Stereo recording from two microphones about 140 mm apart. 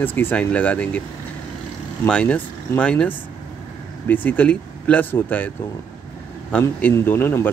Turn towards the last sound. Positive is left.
turn(degrees=15)  # may be behind; listen again after turning